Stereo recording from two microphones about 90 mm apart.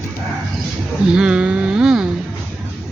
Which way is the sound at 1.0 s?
10° right (ahead or behind).